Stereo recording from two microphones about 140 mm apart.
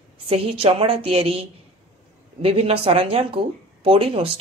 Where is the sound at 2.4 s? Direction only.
40° right (ahead or behind).